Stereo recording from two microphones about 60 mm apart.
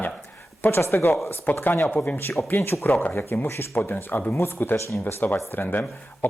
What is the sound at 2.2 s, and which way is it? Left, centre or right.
Speech, left.